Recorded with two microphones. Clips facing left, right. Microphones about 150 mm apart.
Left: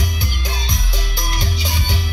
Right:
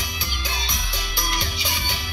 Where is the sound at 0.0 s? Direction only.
45° left (ahead or behind).